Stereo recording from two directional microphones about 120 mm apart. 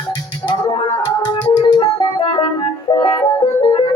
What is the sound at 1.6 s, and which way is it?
Music, 40° left (ahead or behind).